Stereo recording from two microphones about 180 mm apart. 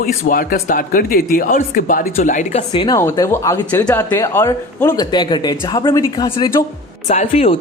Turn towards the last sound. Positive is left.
turn(degrees=35)  # may be behind; listen again after turning